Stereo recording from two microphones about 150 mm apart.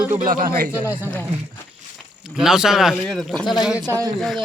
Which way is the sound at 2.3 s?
5° right (ahead or behind).